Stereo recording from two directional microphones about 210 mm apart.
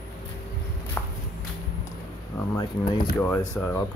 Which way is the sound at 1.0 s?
10° left (ahead or behind).